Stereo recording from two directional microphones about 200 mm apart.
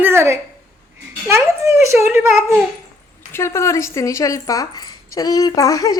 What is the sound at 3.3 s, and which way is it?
Speech, 15° left (ahead or behind).